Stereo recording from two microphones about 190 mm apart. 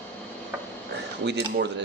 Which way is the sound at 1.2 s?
65° right (ahead or behind).